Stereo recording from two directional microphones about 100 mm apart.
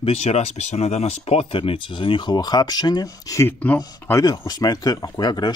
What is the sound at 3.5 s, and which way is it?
Speech, 15° left (ahead or behind).